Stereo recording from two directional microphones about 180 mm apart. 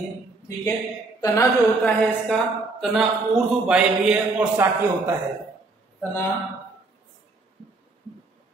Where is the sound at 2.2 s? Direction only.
Centre (ahead or behind).